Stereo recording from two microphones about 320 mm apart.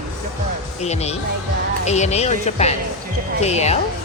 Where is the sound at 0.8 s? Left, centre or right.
Centre.